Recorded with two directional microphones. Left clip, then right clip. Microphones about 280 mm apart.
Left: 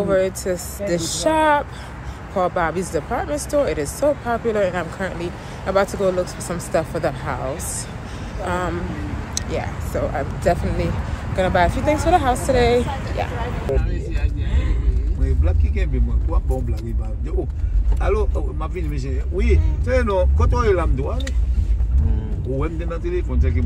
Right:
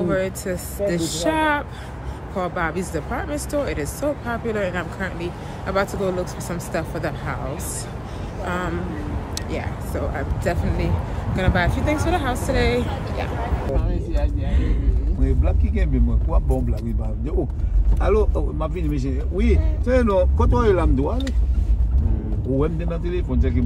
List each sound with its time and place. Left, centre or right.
0.1 s speech: centre
8.5 s speech: centre
15.4 s speech: right
18.0 s speech: right
22.6 s speech: right